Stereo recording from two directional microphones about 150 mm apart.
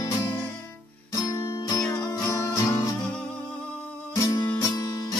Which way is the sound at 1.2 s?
25° left (ahead or behind).